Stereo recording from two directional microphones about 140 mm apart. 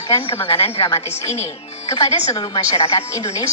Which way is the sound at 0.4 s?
45° left (ahead or behind).